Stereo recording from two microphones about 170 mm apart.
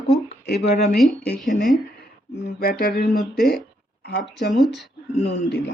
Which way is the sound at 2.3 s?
75° left (ahead or behind).